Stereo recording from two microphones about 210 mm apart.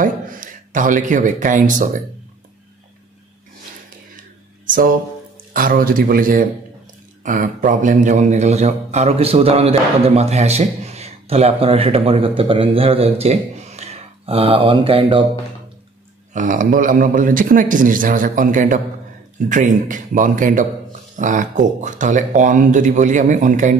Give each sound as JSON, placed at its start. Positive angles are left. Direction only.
{"t": 0.0, "sound": "speech", "side_deg": -40}
{"t": 4.2, "sound": "a sound", "side_deg": -40}
{"t": 5.5, "sound": "a man's voice", "side_deg": -40}
{"t": 16.3, "sound": "speech", "side_deg": -40}